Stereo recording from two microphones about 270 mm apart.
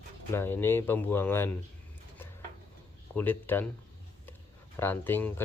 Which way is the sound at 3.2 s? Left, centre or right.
Centre.